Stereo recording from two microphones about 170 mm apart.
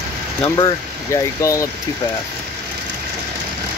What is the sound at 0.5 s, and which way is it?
Speech, 20° left (ahead or behind).